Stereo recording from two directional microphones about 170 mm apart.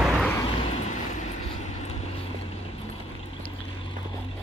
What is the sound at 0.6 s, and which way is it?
Vehicle, 40° left (ahead or behind).